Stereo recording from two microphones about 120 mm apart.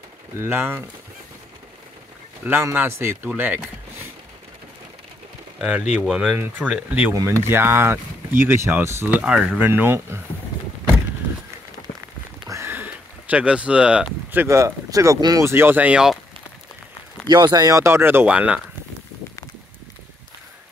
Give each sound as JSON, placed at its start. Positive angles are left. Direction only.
{"t": 0.4, "sound": "speech", "side_deg": -20}
{"t": 2.4, "sound": "speech", "side_deg": -15}
{"t": 5.6, "sound": "speech", "side_deg": -10}
{"t": 9.1, "sound": "speech", "side_deg": -10}
{"t": 12.4, "sound": "a sound", "side_deg": -20}
{"t": 15.4, "sound": "speech", "side_deg": -20}
{"t": 17.3, "sound": "speech", "side_deg": -35}